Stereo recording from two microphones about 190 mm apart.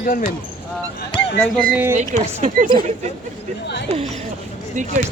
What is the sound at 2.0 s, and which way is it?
Speech, 35° right (ahead or behind).